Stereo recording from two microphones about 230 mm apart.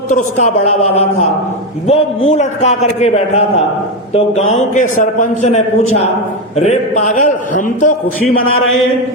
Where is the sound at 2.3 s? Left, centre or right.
Left.